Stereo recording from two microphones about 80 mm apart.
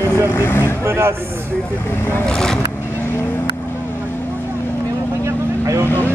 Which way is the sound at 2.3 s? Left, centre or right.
Centre.